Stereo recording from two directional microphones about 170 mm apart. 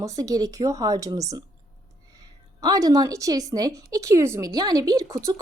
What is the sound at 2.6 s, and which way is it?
A woman's voice, 20° right (ahead or behind).